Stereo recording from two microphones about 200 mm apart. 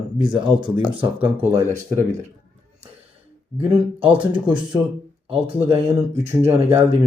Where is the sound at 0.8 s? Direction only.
5° right (ahead or behind).